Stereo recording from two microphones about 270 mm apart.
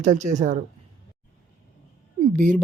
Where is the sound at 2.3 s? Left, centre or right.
Right.